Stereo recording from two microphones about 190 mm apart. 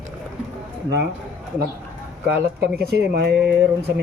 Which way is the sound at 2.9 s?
70° right (ahead or behind).